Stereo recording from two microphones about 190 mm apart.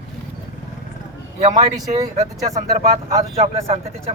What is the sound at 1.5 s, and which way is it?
Speech, 20° right (ahead or behind).